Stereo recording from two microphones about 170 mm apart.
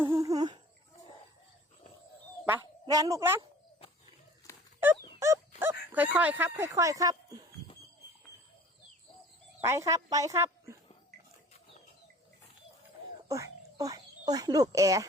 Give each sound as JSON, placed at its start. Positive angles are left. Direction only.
{"t": 0.1, "sound": "humming", "side_deg": -20}
{"t": 2.8, "sound": "a woman's voice", "side_deg": -20}
{"t": 4.5, "sound": "a sound", "side_deg": 15}
{"t": 5.2, "sound": "dog", "side_deg": -15}
{"t": 5.9, "sound": "speech", "side_deg": -10}
{"t": 9.6, "sound": "speech", "side_deg": -15}
{"t": 13.2, "sound": "speech", "side_deg": -20}